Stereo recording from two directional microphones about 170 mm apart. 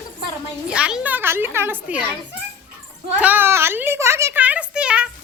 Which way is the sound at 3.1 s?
10° right (ahead or behind).